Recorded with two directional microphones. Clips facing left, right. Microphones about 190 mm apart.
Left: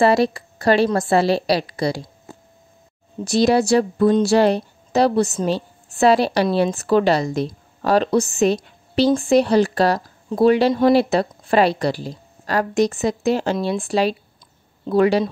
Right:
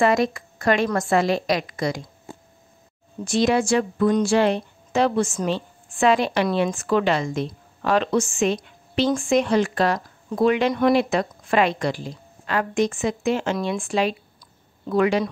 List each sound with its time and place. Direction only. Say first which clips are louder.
0.0 s speech: left 3 dB; 35° left (ahead or behind)
3.3 s speech: left 4 dB; 35° left (ahead or behind)